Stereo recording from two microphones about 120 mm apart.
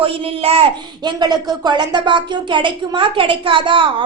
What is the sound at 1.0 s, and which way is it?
A child's voice, 35° right (ahead or behind).